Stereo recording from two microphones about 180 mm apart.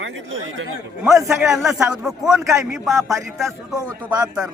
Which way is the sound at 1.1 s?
15° right (ahead or behind).